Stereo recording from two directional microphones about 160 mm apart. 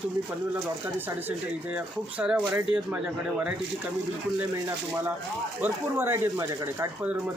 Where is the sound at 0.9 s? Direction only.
10° right (ahead or behind).